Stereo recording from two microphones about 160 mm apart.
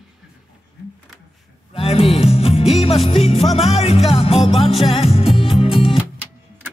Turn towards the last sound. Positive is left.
turn(degrees=35)  # may be behind; listen again after turning